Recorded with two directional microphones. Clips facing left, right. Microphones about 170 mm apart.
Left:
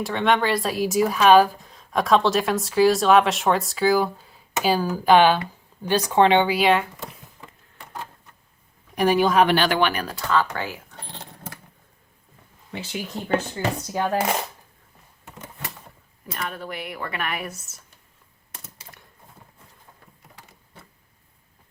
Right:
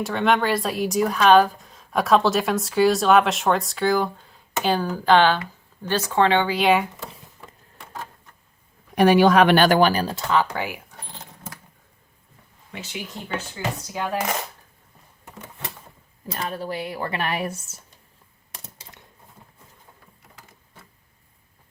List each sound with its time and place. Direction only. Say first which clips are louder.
0.0 s speech: even; centre (ahead or behind); by 6.6 s 15° left (ahead or behind)
9.0 s speech: right 3 dB; 70° right (ahead or behind)
9.6 s speech: right 4 dB; 45° right (ahead or behind); by 10.9 s 15° right (ahead or behind)
11.0 s a sound: left 2 dB; 35° left (ahead or behind)
12.7 s speech: left 3 dB; 35° left (ahead or behind)
16.3 s speech: right 3 dB; 35° right (ahead or behind)